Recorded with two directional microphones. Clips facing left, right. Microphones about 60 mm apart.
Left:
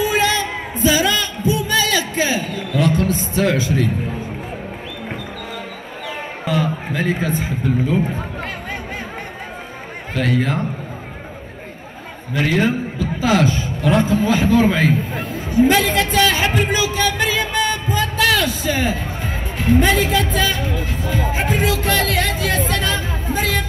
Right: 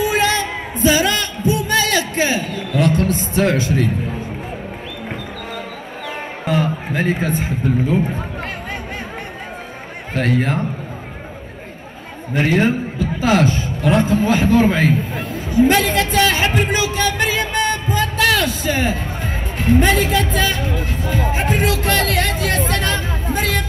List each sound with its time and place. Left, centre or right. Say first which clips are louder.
0.0 s music: right 1 dB; right
6.0 s speech: right 1 dB; right
10.1 s a man's voice: right 1 dB; right
12.3 s a man's voice: right 2 dB; right
15.1 s a sound: right 1 dB; left
15.7 s music: even; right
19.6 s speech: even; right